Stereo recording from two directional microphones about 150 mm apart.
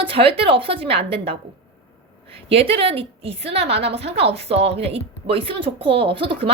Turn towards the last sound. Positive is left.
turn(degrees=-35)  # may be behind; listen again after turning